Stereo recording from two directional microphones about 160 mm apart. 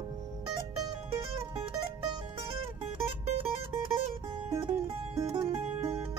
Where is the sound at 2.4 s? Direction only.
35° right (ahead or behind).